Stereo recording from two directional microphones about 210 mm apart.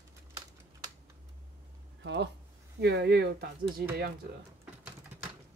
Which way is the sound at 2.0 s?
55° right (ahead or behind).